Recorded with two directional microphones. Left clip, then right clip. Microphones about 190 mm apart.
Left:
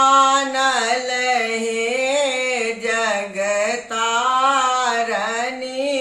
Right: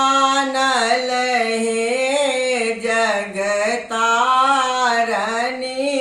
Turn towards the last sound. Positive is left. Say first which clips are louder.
# right 1 dB
turn(degrees=5)  # may be behind; listen again after turning